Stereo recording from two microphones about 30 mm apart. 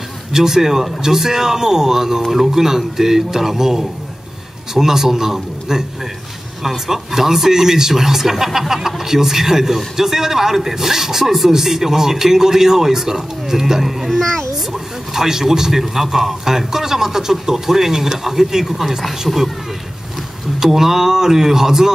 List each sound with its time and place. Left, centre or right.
0.3 s speech: centre
14.1 s a child's voice: centre
14.7 s speech: centre
20.5 s speech: centre